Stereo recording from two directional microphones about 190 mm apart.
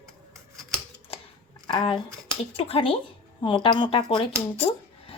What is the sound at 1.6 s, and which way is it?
Speech, 25° left (ahead or behind).